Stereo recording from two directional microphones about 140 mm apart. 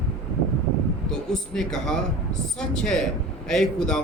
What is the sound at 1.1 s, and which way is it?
Speech, 5° left (ahead or behind).